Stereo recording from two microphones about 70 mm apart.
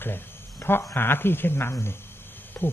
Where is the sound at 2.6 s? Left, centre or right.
Left.